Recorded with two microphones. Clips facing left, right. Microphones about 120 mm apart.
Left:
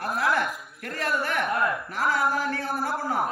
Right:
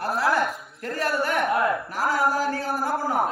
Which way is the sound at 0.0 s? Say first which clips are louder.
Right 2 dB; 35° right (ahead or behind).